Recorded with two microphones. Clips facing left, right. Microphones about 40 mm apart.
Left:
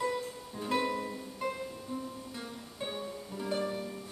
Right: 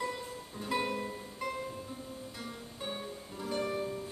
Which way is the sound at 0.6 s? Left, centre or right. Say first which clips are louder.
Left 2 dB; centre.